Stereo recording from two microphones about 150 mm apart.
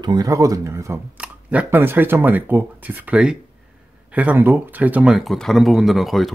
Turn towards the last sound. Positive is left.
turn(degrees=0)  # may be behind; listen again after turning